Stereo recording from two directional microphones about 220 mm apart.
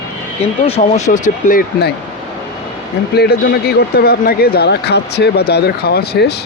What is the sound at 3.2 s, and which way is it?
A man's voice, 45° left (ahead or behind).